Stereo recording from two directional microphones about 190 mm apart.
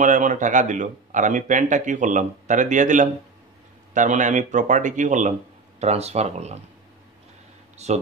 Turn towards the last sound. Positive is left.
turn(degrees=-35)  # may be behind; listen again after turning